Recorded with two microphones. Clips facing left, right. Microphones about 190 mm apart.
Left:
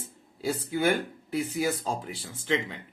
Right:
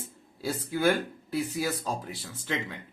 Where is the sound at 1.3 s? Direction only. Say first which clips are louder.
Left 2 dB; 20° left (ahead or behind).